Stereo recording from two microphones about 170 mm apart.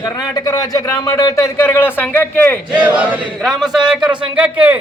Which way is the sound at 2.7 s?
5° right (ahead or behind).